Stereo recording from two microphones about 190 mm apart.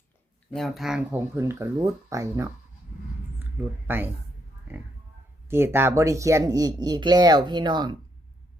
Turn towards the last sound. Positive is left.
turn(degrees=-25)  # may be behind; listen again after turning